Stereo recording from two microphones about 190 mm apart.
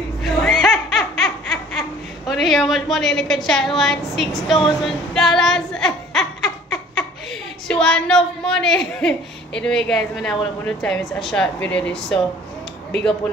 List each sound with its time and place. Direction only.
0.2 s laughter: centre (ahead or behind)
4.5 s a sound: centre (ahead or behind)
7.6 s a woman's voice: 5° left (ahead or behind)